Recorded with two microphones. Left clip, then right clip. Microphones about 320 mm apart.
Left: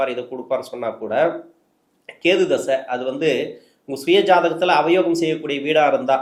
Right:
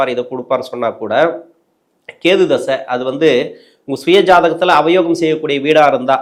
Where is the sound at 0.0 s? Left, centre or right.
Right.